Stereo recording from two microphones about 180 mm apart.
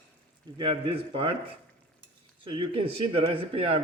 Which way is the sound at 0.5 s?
30° right (ahead or behind).